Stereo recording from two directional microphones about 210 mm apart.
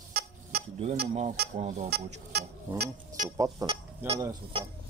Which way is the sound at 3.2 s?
15° right (ahead or behind).